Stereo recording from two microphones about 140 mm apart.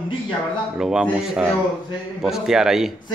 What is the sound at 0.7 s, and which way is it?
A man's voice, 5° right (ahead or behind).